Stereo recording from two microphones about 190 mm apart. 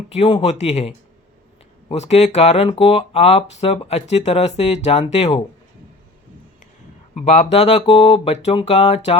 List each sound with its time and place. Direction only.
0.1 s speech: 30° left (ahead or behind)
7.1 s speech: 35° left (ahead or behind)